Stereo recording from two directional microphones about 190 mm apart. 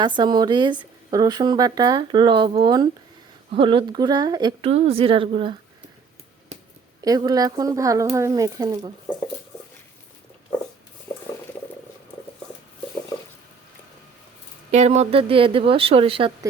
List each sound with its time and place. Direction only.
0.0 s speech: 20° right (ahead or behind)
4.7 s speech: 35° right (ahead or behind)
7.0 s speech: 20° right (ahead or behind)
11.1 s boiling: 10° left (ahead or behind)
14.7 s speech: 35° right (ahead or behind)